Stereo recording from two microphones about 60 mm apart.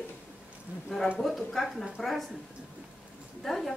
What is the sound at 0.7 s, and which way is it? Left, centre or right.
Speech, right.